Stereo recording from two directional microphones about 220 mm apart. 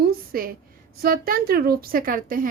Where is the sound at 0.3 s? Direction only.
40° right (ahead or behind).